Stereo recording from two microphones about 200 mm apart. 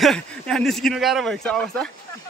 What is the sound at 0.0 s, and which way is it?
Speech, 5° left (ahead or behind).